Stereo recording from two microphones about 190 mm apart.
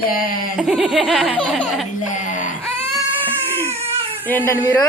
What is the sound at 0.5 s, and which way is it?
Laughter, centre (ahead or behind).